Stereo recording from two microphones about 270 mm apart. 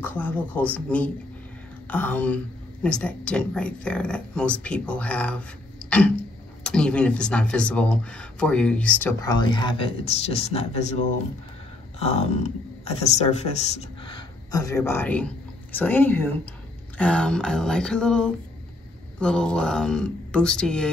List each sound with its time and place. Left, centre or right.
0.0 s speech: centre
5.9 s a sound: centre
6.6 s speech: centre